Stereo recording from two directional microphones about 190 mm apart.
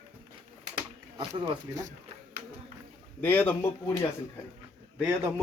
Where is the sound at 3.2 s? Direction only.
10° left (ahead or behind).